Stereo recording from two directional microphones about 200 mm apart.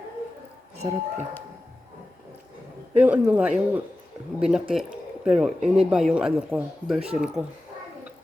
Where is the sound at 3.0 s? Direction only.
5° right (ahead or behind).